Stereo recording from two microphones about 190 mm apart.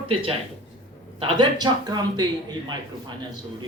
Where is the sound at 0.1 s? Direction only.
30° right (ahead or behind).